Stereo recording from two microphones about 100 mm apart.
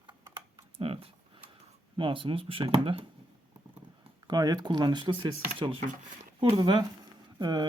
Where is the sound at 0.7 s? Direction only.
70° right (ahead or behind).